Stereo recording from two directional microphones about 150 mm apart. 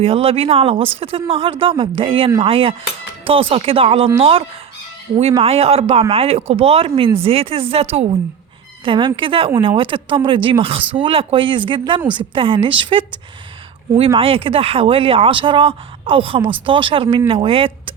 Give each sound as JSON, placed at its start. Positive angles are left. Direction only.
{"t": 0.0, "sound": "speech", "side_deg": -40}
{"t": 14.1, "sound": "speech", "side_deg": -35}